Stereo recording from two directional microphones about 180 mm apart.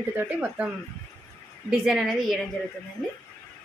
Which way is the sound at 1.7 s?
Centre (ahead or behind).